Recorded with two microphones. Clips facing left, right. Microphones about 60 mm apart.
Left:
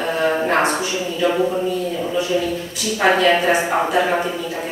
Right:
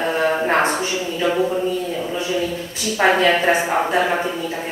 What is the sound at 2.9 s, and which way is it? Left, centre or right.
A woman's voice, right.